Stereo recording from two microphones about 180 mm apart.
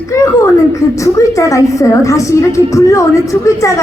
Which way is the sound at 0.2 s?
15° left (ahead or behind).